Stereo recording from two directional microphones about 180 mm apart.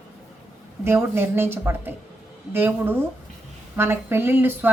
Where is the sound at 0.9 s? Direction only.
15° right (ahead or behind).